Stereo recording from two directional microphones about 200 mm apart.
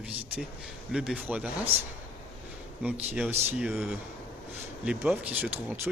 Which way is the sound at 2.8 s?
5° right (ahead or behind).